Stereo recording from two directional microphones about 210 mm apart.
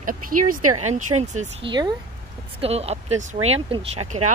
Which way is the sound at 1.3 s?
35° right (ahead or behind).